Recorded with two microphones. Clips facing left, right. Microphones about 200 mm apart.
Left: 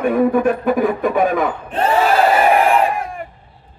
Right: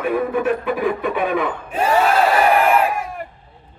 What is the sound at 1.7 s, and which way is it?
Battle cry, 10° right (ahead or behind).